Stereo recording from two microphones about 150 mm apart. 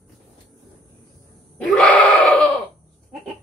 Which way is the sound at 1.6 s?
10° left (ahead or behind).